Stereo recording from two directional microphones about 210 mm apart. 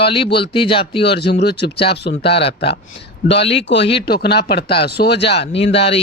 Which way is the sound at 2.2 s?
25° left (ahead or behind).